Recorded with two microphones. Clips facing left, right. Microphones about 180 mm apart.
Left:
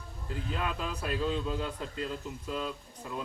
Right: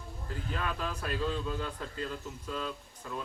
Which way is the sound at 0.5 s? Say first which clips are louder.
Even; 15° left (ahead or behind).